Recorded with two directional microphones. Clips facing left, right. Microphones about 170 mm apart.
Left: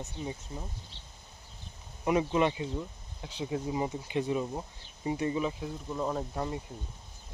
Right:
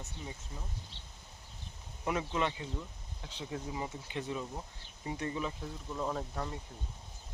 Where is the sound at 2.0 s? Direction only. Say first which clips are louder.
Left 7 dB; 15° left (ahead or behind).